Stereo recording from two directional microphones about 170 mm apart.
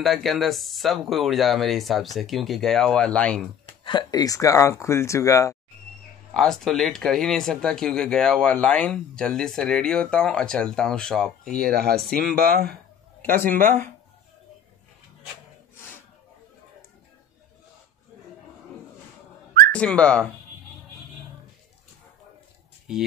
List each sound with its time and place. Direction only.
0.0 s speech: centre (ahead or behind)
3.6 s speech: 30° left (ahead or behind)
6.3 s speech: centre (ahead or behind)
11.5 s speech: 65° right (ahead or behind)
12.0 s speech: 5° left (ahead or behind)
12.4 s speech: 60° right (ahead or behind)
13.2 s speech: 10° left (ahead or behind)
19.7 s speech: 5° left (ahead or behind)